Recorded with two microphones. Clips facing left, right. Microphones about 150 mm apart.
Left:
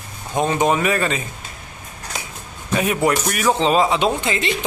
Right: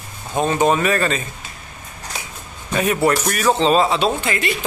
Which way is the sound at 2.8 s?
15° left (ahead or behind).